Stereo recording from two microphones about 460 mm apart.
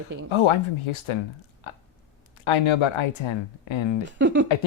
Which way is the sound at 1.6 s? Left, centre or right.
Left.